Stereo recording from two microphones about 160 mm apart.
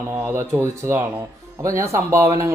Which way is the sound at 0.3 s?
15° right (ahead or behind).